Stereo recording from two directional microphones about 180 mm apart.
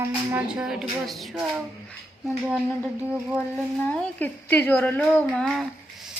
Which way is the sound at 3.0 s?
5° right (ahead or behind).